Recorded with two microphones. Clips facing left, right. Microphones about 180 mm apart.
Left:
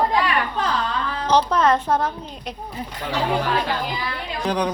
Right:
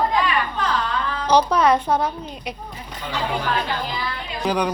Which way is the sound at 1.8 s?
5° left (ahead or behind).